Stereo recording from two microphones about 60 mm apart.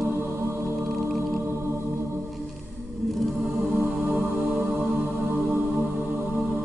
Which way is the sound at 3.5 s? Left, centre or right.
Right.